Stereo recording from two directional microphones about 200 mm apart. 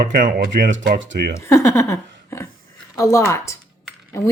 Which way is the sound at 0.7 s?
70° right (ahead or behind).